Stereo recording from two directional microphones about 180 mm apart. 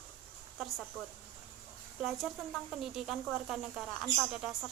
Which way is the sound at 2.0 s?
Centre (ahead or behind).